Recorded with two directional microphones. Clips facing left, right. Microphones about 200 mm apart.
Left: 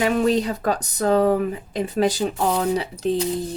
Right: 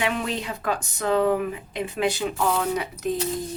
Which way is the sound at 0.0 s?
40° left (ahead or behind).